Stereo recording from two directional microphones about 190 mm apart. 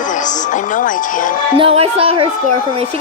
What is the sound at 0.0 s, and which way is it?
Speech, 40° left (ahead or behind).